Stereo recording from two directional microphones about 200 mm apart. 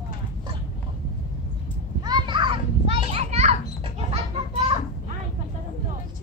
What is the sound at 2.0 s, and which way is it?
Children playing, 20° right (ahead or behind).